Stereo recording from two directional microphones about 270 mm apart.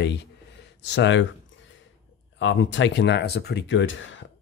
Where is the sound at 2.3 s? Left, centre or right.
Left.